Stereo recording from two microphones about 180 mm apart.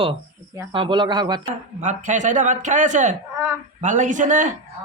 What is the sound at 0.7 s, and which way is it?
Speech, 25° right (ahead or behind).